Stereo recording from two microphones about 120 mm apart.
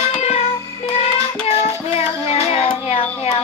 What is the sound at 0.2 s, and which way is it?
Music, 65° left (ahead or behind).